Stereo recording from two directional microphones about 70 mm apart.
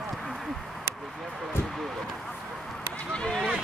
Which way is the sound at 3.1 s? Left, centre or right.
Centre.